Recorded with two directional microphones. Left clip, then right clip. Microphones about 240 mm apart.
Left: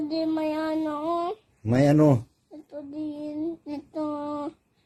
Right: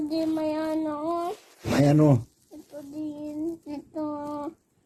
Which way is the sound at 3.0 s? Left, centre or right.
Left.